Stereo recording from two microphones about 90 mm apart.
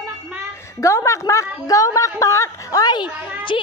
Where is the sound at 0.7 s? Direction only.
35° left (ahead or behind); by 3.1 s 50° left (ahead or behind).